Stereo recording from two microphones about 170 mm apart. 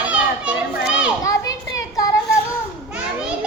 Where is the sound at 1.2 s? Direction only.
20° left (ahead or behind).